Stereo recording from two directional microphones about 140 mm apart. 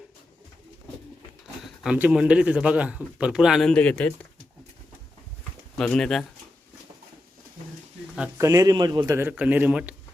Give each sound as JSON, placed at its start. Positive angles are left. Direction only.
{"t": 1.6, "sound": "a sound", "side_deg": 0}
{"t": 2.0, "sound": "a man's voice", "side_deg": -10}
{"t": 5.7, "sound": "speech", "side_deg": 5}
{"t": 8.4, "sound": "a man's voice", "side_deg": -25}
{"t": 9.3, "sound": "a man's voice", "side_deg": -10}